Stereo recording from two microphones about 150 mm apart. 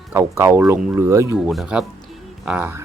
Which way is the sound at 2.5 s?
15° right (ahead or behind).